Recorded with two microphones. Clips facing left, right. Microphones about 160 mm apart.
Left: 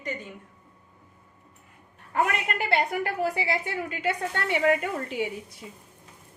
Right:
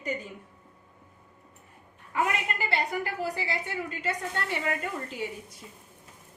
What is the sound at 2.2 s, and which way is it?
A woman's voice, 60° left (ahead or behind).